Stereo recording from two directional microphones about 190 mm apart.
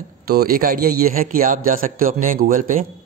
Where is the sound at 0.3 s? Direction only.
55° right (ahead or behind).